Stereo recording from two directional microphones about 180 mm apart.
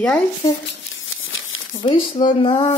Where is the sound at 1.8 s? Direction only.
25° left (ahead or behind).